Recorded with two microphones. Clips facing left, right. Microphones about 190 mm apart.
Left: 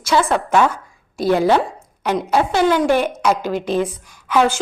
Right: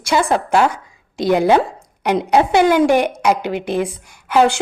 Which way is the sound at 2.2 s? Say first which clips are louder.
Right 3 dB; 15° right (ahead or behind).